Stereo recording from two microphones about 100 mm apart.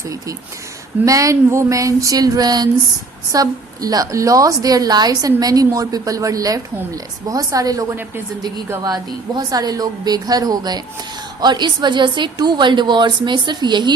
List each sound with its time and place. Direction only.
1.0 s a woman's voice: 35° right (ahead or behind)